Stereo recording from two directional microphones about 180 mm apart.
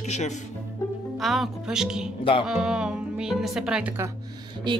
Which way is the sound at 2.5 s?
5° right (ahead or behind).